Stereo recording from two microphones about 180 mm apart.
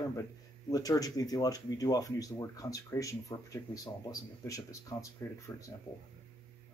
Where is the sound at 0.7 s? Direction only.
20° left (ahead or behind).